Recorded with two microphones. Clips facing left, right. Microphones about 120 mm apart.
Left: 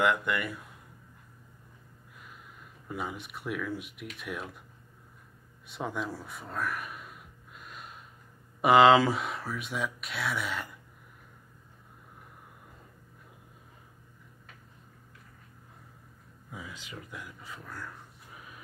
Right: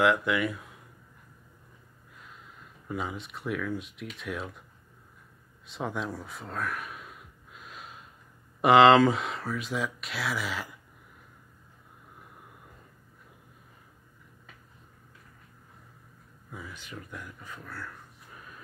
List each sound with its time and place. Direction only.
0.0 s speech: centre (ahead or behind)
2.9 s speech: 5° left (ahead or behind)
5.7 s a sound: centre (ahead or behind)
8.5 s speech: centre (ahead or behind)
16.5 s speech: 10° left (ahead or behind)